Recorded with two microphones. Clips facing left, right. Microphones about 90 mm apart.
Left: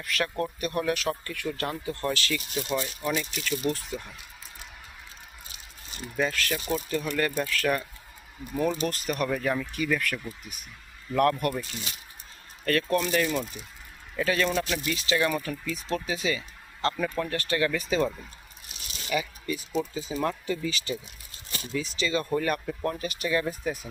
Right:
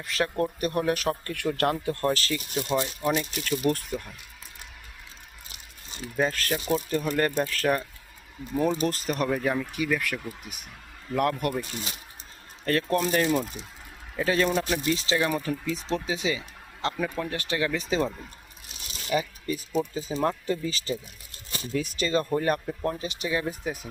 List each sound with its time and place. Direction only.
0.0 s speech: 30° right (ahead or behind)
1.2 s speech: 55° right (ahead or behind)
2.0 s speech: 35° right (ahead or behind)
2.6 s speech: 25° right (ahead or behind)
3.2 s speech: 45° right (ahead or behind)
6.2 s speech: 35° right (ahead or behind)
9.3 s speech: 15° right (ahead or behind)
11.7 s speech: 35° right (ahead or behind)
13.3 s speech: 15° right (ahead or behind)
19.1 s speech: 40° right (ahead or behind)
21.7 s speech: 50° right (ahead or behind)
22.4 s speech: 30° right (ahead or behind)